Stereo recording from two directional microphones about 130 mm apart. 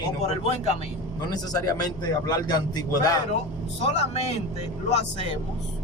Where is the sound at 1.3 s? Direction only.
30° left (ahead or behind).